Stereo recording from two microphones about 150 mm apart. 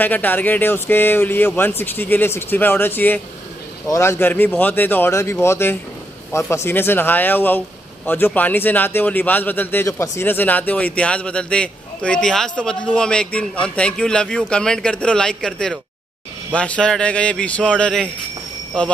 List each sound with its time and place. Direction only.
0.0 s a man's voice: 10° left (ahead or behind)